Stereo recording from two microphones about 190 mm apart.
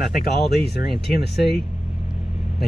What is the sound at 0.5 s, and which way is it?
Speech, 60° left (ahead or behind).